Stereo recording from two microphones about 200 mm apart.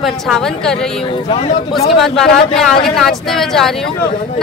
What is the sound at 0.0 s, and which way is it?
Speech, centre (ahead or behind).